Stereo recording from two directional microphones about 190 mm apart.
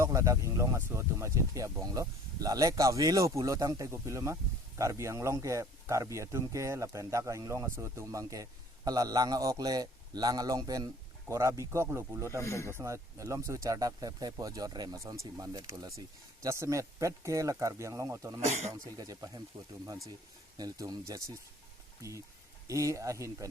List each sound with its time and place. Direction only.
0.0 s speech: 15° right (ahead or behind)
12.4 s speech: 15° left (ahead or behind)
12.7 s speech: 15° right (ahead or behind)
18.3 s speech: 35° right (ahead or behind)
18.9 s speech: 20° right (ahead or behind)
20.6 s speech: 20° right (ahead or behind)
22.6 s speech: 15° right (ahead or behind)